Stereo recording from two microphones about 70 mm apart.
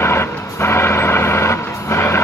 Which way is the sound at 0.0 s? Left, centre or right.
Left.